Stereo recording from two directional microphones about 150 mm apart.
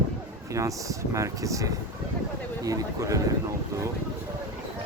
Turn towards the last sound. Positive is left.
turn(degrees=-20)  # may be behind; listen again after turning